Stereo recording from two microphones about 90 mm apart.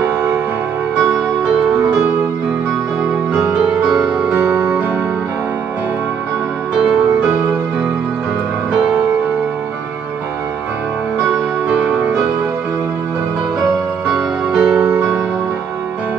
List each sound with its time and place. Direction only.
3.5 s music: 5° right (ahead or behind)
4.3 s music: 20° right (ahead or behind)
14.0 s music: 5° right (ahead or behind)
14.8 s music: 30° right (ahead or behind)